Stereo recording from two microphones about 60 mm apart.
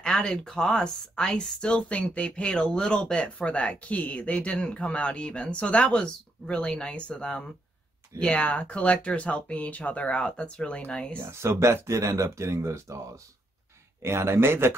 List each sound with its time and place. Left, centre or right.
0.0 s speech: centre
11.1 s speech: right